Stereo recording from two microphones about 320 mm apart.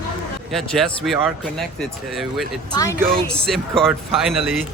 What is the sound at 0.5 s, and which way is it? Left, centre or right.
Speech, centre.